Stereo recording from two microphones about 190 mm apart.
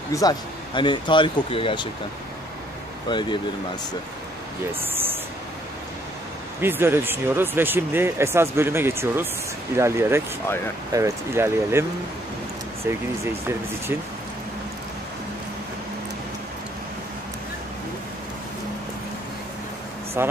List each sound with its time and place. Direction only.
0.1 s speech: 20° left (ahead or behind)
3.1 s speech: 25° left (ahead or behind)
6.6 s speech: 10° right (ahead or behind)
12.8 s speech: 15° right (ahead or behind)
20.2 s speech: 10° right (ahead or behind)